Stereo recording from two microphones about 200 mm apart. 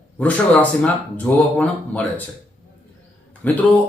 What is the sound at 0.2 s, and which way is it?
Speech, 5° left (ahead or behind).